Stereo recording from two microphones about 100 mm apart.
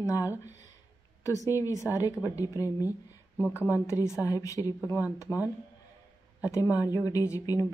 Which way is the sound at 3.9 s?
30° left (ahead or behind).